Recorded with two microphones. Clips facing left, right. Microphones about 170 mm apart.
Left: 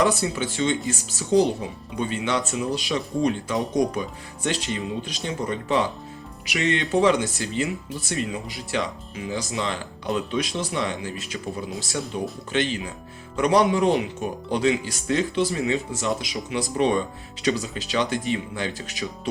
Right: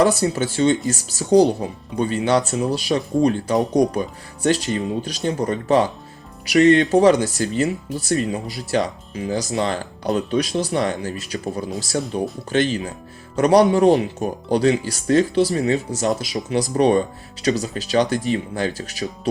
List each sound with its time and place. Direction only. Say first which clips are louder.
0.0 s speech: right 5 dB; 40° right (ahead or behind)